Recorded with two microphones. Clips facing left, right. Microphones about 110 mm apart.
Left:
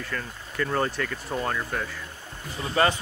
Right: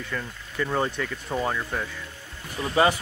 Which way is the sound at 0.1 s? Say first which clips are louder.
Right 1 dB; 5° right (ahead or behind).